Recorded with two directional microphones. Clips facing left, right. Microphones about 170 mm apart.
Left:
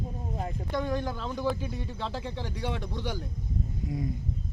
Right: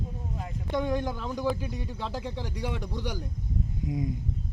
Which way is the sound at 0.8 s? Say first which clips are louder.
Right 2 dB; 15° right (ahead or behind).